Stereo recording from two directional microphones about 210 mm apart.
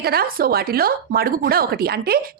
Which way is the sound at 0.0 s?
45° right (ahead or behind).